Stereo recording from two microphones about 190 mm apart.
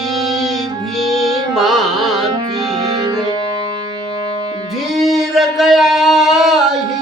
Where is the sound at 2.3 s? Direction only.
20° right (ahead or behind).